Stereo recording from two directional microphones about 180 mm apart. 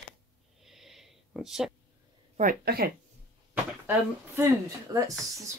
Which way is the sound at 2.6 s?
60° right (ahead or behind).